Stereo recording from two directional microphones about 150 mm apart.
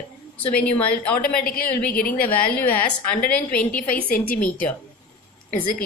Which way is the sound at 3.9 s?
75° left (ahead or behind).